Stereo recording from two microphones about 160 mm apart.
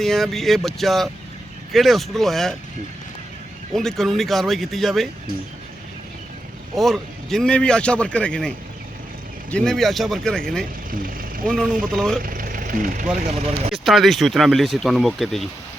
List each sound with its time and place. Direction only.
0.0 s a man's voice: centre (ahead or behind)
3.8 s a man's voice: centre (ahead or behind)
6.7 s a man's voice: centre (ahead or behind)
10.9 s vehicle: 60° right (ahead or behind)
11.4 s a man's voice: 5° left (ahead or behind)
12.2 s vehicle: 60° right (ahead or behind)
13.1 s speech: 40° right (ahead or behind)
13.8 s a man's voice: centre (ahead or behind)